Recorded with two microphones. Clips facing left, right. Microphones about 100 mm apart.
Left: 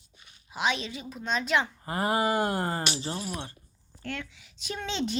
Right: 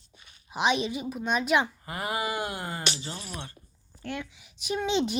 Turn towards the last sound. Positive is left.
turn(degrees=-15)  # may be behind; listen again after turning